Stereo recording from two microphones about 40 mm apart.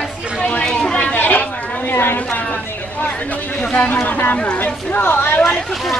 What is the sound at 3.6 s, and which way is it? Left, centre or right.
Speech, left.